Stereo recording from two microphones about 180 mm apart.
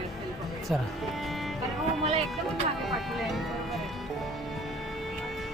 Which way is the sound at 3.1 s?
Centre (ahead or behind).